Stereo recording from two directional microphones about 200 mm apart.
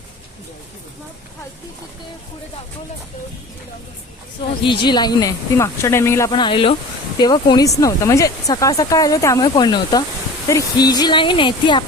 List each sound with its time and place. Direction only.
4.6 s speech: 25° left (ahead or behind)